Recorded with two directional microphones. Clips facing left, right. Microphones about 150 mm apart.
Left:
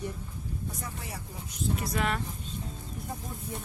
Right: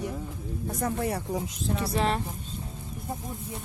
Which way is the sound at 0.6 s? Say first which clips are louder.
Right 16 dB; 55° right (ahead or behind).